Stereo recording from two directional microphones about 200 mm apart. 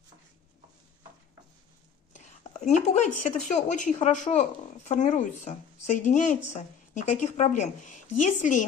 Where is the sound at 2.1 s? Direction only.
35° left (ahead or behind).